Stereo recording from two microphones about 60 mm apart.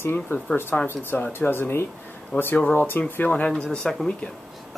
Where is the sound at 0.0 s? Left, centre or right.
Left.